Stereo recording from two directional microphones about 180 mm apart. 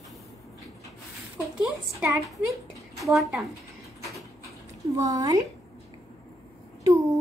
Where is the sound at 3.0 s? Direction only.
Centre (ahead or behind).